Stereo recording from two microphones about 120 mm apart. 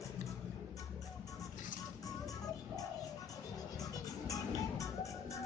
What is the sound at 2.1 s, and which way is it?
Music, 30° left (ahead or behind).